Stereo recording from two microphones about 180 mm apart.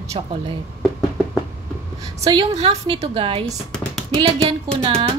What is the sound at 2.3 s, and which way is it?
A woman's voice, 35° right (ahead or behind).